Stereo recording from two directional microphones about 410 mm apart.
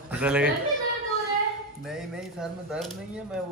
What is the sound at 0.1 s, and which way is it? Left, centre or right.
Speech, centre.